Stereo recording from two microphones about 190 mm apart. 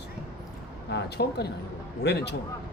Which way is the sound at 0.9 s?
60° left (ahead or behind).